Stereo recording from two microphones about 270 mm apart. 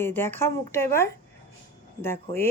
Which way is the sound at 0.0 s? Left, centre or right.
Centre.